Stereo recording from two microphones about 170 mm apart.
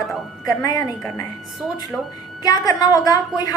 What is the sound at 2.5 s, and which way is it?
A woman's voice, 20° left (ahead or behind).